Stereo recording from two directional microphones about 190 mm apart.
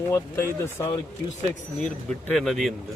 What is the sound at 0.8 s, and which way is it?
Speech, 15° left (ahead or behind).